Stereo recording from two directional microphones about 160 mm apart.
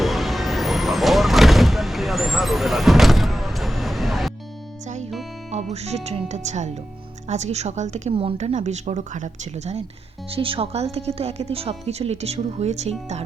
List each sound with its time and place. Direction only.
0.0 s vehicle: centre (ahead or behind)
5.5 s speech: 45° right (ahead or behind)
10.3 s speech: 35° right (ahead or behind)